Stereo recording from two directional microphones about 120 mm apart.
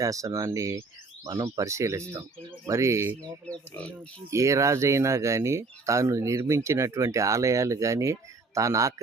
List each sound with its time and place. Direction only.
0.0 s speech: 25° right (ahead or behind)
3.4 s speech: 10° left (ahead or behind)
4.3 s speech: 25° right (ahead or behind)